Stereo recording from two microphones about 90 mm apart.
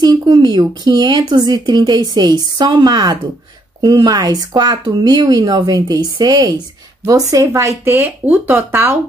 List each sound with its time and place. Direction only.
0.0 s speech: 50° right (ahead or behind); by 8.9 s 25° right (ahead or behind)